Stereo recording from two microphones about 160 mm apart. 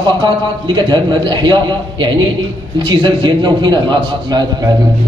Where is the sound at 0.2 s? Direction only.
30° right (ahead or behind).